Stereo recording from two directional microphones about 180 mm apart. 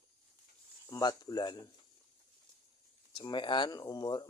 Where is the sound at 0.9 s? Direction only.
25° left (ahead or behind).